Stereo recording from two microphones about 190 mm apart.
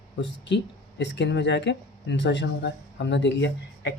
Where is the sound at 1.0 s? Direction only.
70° left (ahead or behind).